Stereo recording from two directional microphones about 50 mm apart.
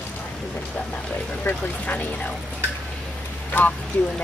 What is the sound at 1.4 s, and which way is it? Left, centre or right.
Speech, left.